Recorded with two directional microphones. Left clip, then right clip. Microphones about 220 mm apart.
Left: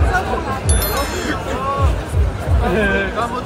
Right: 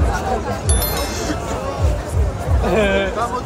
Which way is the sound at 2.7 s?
30° right (ahead or behind).